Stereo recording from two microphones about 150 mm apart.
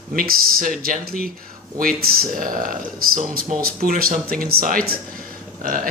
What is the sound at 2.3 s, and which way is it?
Speech, 65° right (ahead or behind).